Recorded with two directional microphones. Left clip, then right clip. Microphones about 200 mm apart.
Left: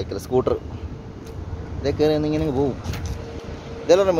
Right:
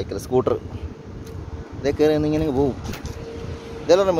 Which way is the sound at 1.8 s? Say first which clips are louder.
Right 1 dB; 20° right (ahead or behind).